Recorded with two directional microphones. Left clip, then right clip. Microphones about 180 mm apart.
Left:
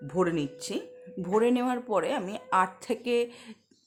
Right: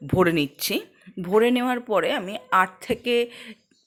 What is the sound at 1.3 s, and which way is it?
A woman's voice, 15° right (ahead or behind).